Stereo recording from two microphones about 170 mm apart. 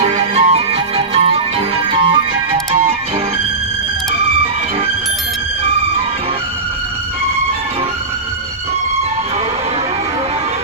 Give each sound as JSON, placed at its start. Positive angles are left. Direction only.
{"t": 0.0, "sound": "music", "side_deg": -40}